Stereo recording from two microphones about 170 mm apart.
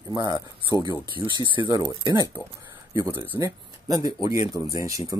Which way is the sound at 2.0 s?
20° right (ahead or behind).